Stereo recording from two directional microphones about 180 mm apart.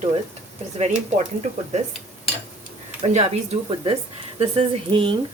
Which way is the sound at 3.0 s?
35° right (ahead or behind).